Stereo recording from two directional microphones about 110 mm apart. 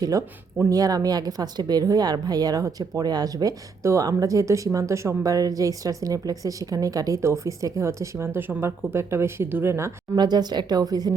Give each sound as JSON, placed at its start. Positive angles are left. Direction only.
{"t": 0.0, "sound": "speech", "side_deg": -30}
{"t": 10.2, "sound": "speech", "side_deg": -40}